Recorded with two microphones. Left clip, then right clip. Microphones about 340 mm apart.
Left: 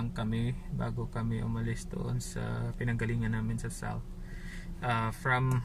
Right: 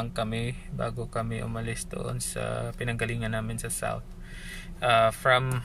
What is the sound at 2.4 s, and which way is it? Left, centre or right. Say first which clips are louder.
Speech: right 8 dB; right.